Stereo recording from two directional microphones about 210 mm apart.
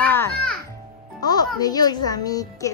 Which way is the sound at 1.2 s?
20° left (ahead or behind).